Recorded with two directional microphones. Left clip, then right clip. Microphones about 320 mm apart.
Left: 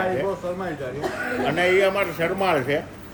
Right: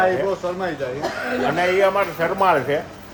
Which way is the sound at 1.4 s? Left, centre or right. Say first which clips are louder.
Right 1 dB; centre.